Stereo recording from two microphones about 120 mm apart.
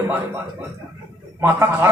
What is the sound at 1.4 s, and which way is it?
Speech, 20° right (ahead or behind).